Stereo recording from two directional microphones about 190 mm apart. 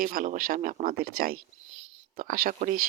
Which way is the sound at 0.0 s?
45° right (ahead or behind).